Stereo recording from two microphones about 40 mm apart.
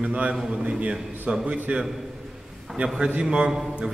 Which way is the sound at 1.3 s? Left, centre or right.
Right.